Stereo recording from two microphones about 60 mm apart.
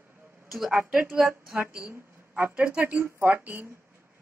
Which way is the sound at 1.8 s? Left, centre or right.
Right.